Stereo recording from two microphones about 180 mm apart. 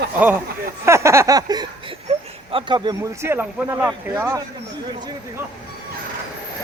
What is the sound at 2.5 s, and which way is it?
Speech, 25° right (ahead or behind).